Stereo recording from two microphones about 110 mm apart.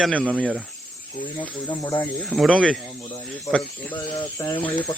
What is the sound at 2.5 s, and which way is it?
Speech, 10° left (ahead or behind).